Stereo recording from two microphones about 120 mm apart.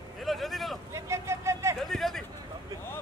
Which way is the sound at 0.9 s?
25° right (ahead or behind).